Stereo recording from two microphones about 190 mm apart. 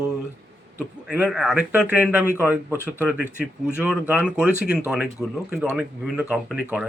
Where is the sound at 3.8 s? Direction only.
10° right (ahead or behind).